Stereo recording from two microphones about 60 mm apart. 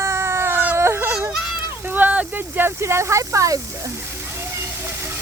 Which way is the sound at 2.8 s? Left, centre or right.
Right.